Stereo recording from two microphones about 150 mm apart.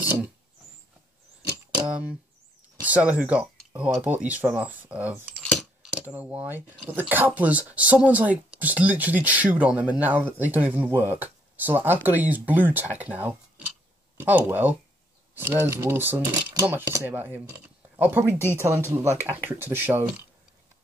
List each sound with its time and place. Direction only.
1.9 s speech: 10° right (ahead or behind)
5.3 s a sound: 5° left (ahead or behind)
5.9 s speech: 10° right (ahead or behind)